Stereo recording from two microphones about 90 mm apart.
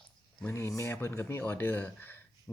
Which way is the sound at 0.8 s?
30° left (ahead or behind).